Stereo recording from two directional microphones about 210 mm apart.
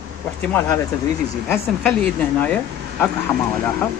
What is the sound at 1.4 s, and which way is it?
Speech, 5° left (ahead or behind).